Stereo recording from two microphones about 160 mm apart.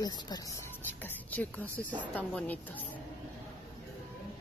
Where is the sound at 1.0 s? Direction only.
10° left (ahead or behind).